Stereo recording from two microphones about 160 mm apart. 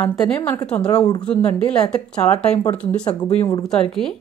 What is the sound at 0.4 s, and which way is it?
Speech, 15° left (ahead or behind).